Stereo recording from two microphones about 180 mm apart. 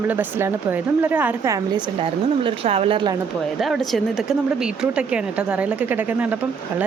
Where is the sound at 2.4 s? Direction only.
30° right (ahead or behind).